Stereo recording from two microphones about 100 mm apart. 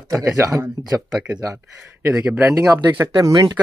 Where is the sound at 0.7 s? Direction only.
40° right (ahead or behind).